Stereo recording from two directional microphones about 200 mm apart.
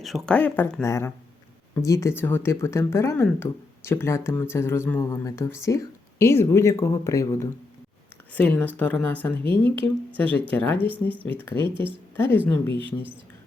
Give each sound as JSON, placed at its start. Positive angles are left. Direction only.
{"t": 0.0, "sound": "speech", "side_deg": 0}
{"t": 10.2, "sound": "speech", "side_deg": 10}
{"t": 11.6, "sound": "speech", "side_deg": -25}
{"t": 12.1, "sound": "a woman's voice", "side_deg": 10}